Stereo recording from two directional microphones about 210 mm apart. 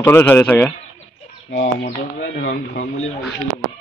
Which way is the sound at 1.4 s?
40° left (ahead or behind).